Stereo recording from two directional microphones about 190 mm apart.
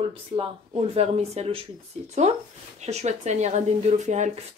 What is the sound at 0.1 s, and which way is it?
Speech, 30° right (ahead or behind).